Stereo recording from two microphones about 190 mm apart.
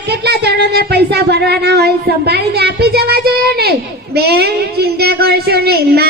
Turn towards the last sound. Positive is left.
turn(degrees=-55)  # may be behind; listen again after turning